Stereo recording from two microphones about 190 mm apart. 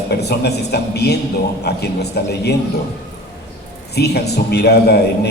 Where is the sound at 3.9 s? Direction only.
60° left (ahead or behind).